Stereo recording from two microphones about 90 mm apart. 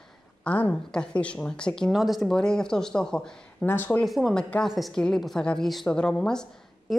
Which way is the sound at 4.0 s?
Centre (ahead or behind).